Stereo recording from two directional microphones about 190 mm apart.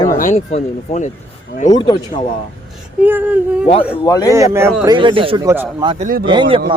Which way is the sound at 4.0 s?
20° left (ahead or behind).